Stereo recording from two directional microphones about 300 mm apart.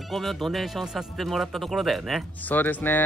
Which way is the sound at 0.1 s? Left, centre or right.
Centre.